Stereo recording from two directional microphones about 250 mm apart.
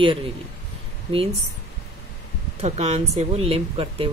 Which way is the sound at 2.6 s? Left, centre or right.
Right.